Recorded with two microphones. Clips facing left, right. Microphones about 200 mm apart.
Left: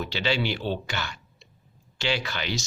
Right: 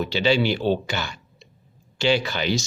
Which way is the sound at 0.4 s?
45° right (ahead or behind).